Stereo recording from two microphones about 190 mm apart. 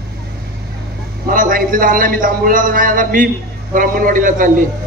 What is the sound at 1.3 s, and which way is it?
Speech, 45° right (ahead or behind).